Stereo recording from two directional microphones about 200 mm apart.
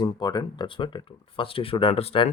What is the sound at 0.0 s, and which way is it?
Speech, 20° left (ahead or behind).